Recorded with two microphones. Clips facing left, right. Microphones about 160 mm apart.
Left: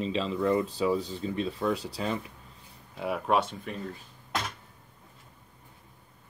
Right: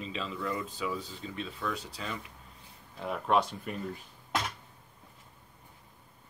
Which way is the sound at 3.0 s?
10° left (ahead or behind).